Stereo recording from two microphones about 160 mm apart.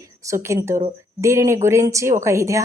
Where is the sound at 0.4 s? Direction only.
15° right (ahead or behind).